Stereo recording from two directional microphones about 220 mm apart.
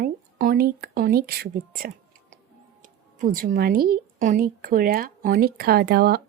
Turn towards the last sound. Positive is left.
turn(degrees=-45)  # may be behind; listen again after turning